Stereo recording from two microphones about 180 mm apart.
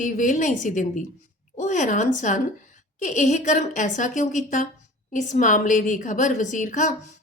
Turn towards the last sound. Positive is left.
turn(degrees=40)  # may be behind; listen again after turning